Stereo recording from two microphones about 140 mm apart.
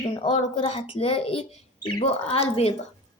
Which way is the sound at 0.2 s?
40° left (ahead or behind).